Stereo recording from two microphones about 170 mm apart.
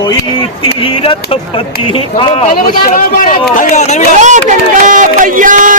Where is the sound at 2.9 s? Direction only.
50° left (ahead or behind).